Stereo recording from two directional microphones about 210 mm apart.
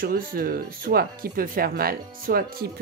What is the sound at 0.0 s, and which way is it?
A woman's voice, 45° right (ahead or behind).